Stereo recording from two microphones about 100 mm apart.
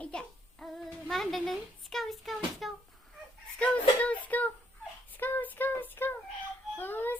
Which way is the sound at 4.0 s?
15° left (ahead or behind).